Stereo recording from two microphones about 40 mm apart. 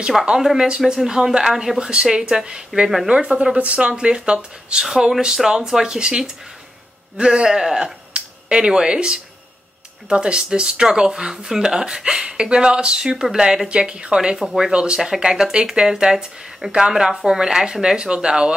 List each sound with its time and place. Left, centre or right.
0.4 s speech: centre
1.8 s speech: right
5.2 s speech: centre
13.7 s speech: right
14.7 s speech: right